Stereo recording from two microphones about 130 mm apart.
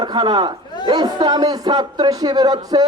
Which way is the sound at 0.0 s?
35° right (ahead or behind).